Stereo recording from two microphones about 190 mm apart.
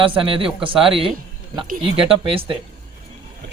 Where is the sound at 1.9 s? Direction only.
30° right (ahead or behind).